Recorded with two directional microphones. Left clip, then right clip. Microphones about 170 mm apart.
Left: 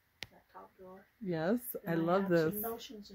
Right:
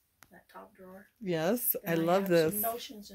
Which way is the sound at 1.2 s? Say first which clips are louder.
Right 4 dB; 5° left (ahead or behind).